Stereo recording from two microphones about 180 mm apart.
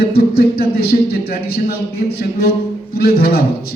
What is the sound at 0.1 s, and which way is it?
Speech, 60° left (ahead or behind).